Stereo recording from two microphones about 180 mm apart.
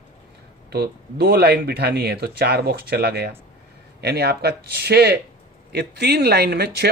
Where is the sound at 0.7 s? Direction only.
60° right (ahead or behind).